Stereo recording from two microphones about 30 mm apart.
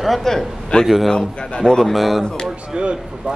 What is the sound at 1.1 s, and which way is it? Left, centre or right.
Speech, left.